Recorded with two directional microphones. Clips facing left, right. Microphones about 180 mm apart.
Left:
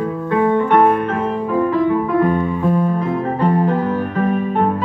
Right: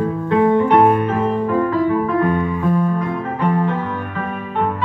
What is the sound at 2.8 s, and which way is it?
Music, 30° left (ahead or behind).